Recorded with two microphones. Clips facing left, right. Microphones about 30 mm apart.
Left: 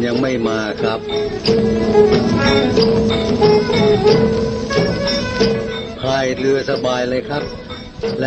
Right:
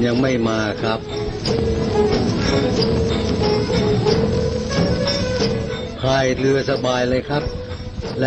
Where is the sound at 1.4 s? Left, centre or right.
Left.